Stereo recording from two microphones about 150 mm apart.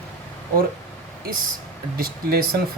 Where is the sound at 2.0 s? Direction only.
90° right.